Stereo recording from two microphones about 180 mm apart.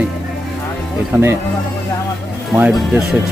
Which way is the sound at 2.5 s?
5° right (ahead or behind).